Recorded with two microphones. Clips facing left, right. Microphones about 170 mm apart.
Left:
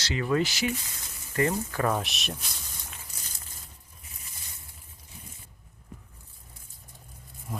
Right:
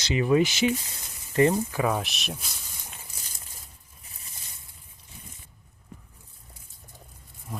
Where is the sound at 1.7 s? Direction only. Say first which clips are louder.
Right 1 dB; 5° right (ahead or behind).